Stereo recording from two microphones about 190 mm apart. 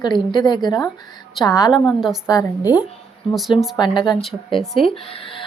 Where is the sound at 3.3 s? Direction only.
Centre (ahead or behind).